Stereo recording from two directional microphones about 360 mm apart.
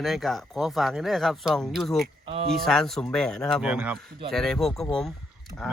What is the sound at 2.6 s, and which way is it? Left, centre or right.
Speech, centre.